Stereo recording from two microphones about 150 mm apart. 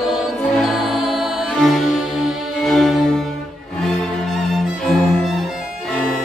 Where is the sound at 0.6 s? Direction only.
Centre (ahead or behind).